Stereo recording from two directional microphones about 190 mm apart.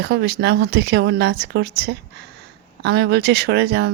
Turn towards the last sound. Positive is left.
turn(degrees=-60)  # may be behind; listen again after turning